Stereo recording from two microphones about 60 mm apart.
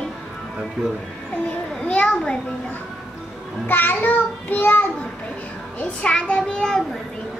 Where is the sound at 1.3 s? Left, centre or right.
Centre.